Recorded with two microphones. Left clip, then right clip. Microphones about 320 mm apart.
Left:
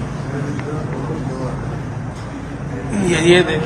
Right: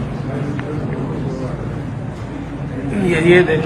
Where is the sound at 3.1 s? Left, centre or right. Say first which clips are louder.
Right 1 dB; centre.